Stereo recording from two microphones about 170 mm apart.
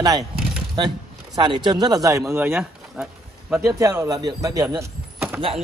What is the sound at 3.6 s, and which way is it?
Speech, 20° right (ahead or behind).